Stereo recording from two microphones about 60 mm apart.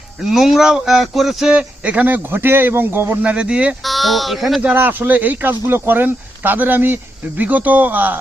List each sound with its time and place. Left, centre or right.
0.2 s speech: centre
1.5 s speech: right
3.2 s speech: centre
3.8 s speech: centre
4.7 s speech: right